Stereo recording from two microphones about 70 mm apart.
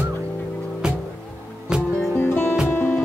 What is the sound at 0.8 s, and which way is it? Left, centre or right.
Music, centre.